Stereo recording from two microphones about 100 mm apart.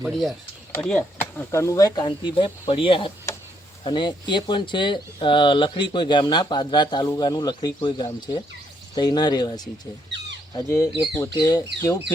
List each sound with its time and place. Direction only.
0.0 s speech: centre (ahead or behind)
0.7 s speech: 15° left (ahead or behind)
1.5 s speech: 30° left (ahead or behind)
2.0 s speech: 55° left (ahead or behind)
2.6 s speech: 65° left (ahead or behind)
3.3 s a sound: 30° left (ahead or behind)
3.8 s speech: 50° left (ahead or behind); by 12.1 s 35° left (ahead or behind)